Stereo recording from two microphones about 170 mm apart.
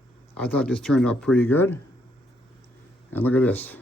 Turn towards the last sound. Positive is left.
turn(degrees=10)  # may be behind; listen again after turning